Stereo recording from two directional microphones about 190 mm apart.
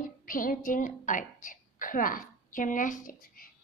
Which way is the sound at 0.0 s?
45° left (ahead or behind).